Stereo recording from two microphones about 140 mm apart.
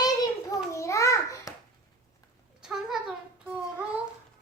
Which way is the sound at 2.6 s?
5° right (ahead or behind).